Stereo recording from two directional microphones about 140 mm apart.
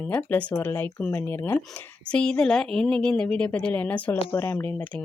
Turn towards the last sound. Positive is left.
turn(degrees=15)  # may be behind; listen again after turning